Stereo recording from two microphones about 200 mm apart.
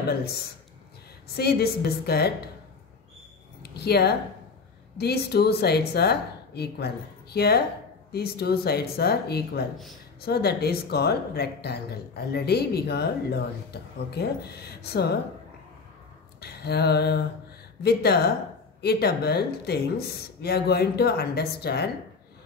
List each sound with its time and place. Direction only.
0.1 s speech: 50° left (ahead or behind)
3.6 s speech: 55° left (ahead or behind)
16.3 s a sound: 55° left (ahead or behind)
17.8 s speech: 55° left (ahead or behind)